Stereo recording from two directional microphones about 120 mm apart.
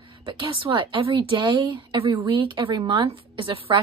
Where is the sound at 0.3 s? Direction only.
50° right (ahead or behind).